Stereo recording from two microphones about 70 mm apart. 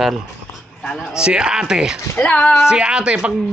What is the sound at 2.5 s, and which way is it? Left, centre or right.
Speech, centre.